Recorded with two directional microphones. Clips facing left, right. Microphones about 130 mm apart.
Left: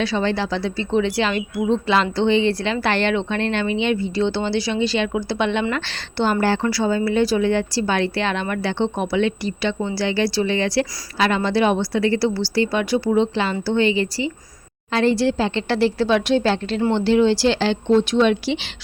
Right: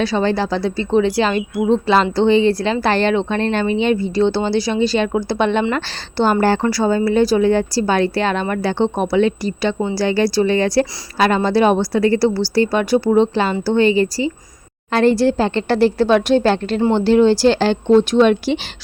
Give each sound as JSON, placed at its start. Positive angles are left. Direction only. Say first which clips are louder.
{"t": 0.0, "sound": "a woman's voice", "louder": "right 4 dB", "side_deg": -40}